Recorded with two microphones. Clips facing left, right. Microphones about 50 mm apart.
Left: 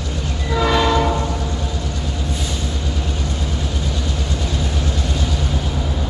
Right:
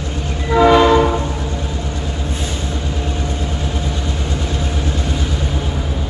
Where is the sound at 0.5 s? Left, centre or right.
Right.